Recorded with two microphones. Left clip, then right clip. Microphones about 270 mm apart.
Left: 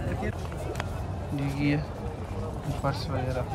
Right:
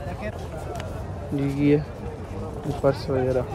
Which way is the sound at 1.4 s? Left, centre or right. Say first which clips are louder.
Right 6 dB; centre.